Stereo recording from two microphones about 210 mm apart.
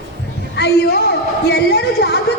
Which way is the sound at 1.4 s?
50° left (ahead or behind).